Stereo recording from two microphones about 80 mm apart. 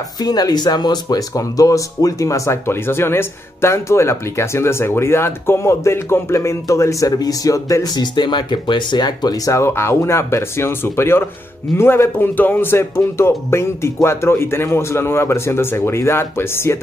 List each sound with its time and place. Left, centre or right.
0.2 s speech: left
1.0 s speech: left
7.9 s speech: left